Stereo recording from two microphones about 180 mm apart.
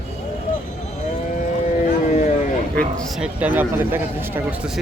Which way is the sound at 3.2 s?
10° right (ahead or behind).